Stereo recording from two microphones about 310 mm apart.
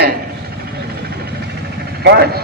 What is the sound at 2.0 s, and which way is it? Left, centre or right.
Speech, right.